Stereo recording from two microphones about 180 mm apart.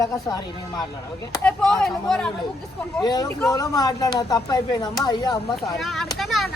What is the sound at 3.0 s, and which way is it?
Speech, 25° left (ahead or behind).